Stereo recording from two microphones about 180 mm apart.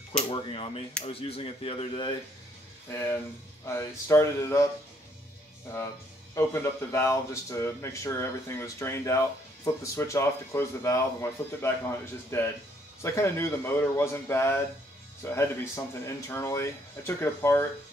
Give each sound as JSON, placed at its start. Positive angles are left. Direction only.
{"t": 0.3, "sound": "speech", "side_deg": 30}
{"t": 2.9, "sound": "speech", "side_deg": 15}
{"t": 6.3, "sound": "speech", "side_deg": 15}